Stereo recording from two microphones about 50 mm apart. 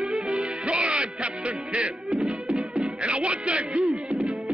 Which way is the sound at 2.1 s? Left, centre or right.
Centre.